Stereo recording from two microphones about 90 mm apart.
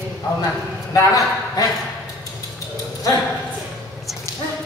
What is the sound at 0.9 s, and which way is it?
Speech, 40° left (ahead or behind).